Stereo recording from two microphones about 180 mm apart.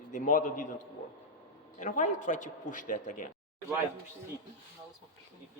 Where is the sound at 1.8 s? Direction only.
45° left (ahead or behind).